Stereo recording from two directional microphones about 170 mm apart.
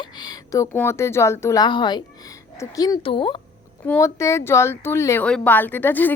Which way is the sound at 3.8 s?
15° left (ahead or behind).